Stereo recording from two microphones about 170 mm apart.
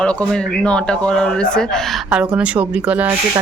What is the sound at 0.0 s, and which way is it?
Speech, 5° left (ahead or behind).